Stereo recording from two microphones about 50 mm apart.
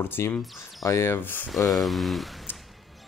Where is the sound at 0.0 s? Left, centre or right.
Left.